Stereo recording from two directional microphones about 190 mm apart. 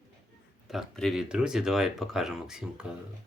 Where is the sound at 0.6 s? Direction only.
Centre (ahead or behind).